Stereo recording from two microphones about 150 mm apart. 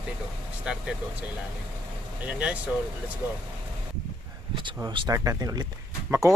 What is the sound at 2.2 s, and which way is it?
Speech, 10° right (ahead or behind).